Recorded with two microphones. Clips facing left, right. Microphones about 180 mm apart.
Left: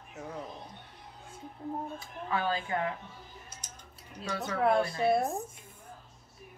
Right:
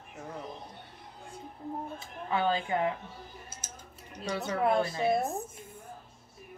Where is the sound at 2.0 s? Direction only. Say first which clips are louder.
Right 2 dB; 25° right (ahead or behind).